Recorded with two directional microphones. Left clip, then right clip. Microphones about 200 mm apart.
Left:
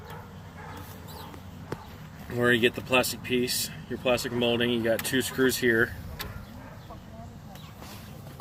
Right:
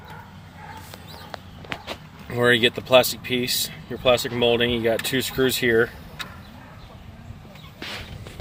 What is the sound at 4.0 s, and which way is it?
Speech, 50° right (ahead or behind).